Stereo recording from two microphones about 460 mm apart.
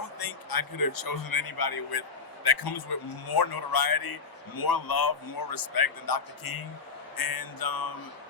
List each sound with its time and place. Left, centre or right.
0.2 s speech: left